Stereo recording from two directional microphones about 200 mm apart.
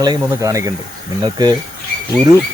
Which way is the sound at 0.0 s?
20° right (ahead or behind).